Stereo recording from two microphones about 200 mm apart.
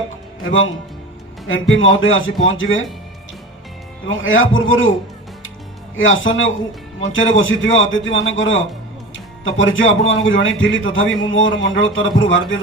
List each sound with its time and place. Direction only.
0.4 s speech: 80° left
4.1 s a man's voice: 75° left (ahead or behind)
6.0 s a man's voice: 75° left (ahead or behind)
9.1 s music: 75° left (ahead or behind)
10.1 s a man's voice: 70° left (ahead or behind)